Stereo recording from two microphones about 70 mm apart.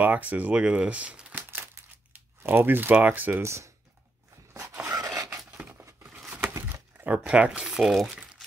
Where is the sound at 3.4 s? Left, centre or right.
Right.